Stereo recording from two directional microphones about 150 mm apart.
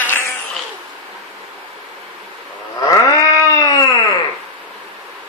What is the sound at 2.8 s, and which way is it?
Goat, 25° left (ahead or behind).